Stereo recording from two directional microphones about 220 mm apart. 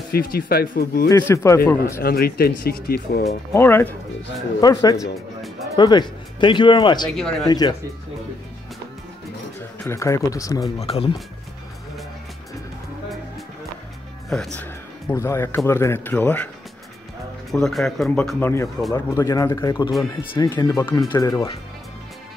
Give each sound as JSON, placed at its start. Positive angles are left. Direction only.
{"t": 0.1, "sound": "speech", "side_deg": 40}
{"t": 1.0, "sound": "speech", "side_deg": 15}
{"t": 2.0, "sound": "speech", "side_deg": 45}
{"t": 3.5, "sound": "speech", "side_deg": 10}
{"t": 7.2, "sound": "speech", "side_deg": 0}
{"t": 7.4, "sound": "speech", "side_deg": 15}
{"t": 9.8, "sound": "speech", "side_deg": 15}
{"t": 10.8, "sound": "speech", "side_deg": 25}
{"t": 14.3, "sound": "speech", "side_deg": 5}
{"t": 17.5, "sound": "speech", "side_deg": 0}
{"t": 18.9, "sound": "speech", "side_deg": 15}